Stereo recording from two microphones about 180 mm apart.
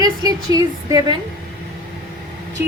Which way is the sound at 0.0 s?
20° right (ahead or behind).